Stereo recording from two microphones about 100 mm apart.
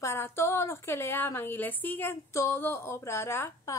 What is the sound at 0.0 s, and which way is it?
A woman's voice, 25° left (ahead or behind).